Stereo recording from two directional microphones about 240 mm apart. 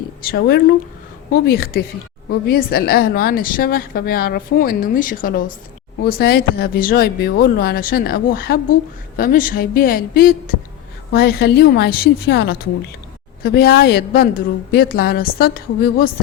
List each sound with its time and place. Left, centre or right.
0.2 s a woman's voice: left